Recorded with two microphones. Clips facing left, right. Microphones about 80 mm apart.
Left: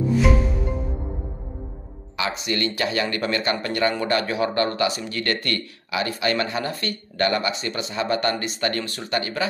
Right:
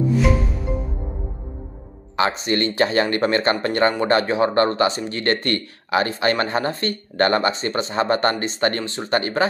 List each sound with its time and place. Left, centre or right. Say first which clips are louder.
0.1 s music: left 1 dB; centre
2.1 s speech: right 5 dB; right